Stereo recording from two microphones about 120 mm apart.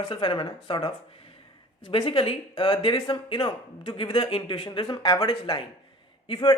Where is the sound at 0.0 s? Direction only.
40° left (ahead or behind).